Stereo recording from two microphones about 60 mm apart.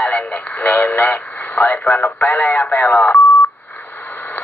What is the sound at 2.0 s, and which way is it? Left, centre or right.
Speech, left.